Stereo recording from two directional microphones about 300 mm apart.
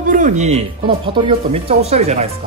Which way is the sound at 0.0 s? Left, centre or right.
Right.